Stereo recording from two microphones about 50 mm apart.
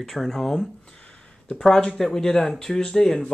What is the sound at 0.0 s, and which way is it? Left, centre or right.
Speech, centre.